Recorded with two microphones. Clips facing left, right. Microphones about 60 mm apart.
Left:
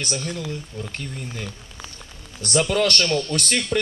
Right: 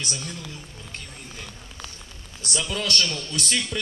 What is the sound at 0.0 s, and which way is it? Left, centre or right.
Speech, left.